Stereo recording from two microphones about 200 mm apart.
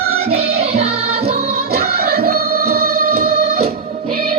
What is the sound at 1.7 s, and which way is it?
Music, 50° right (ahead or behind).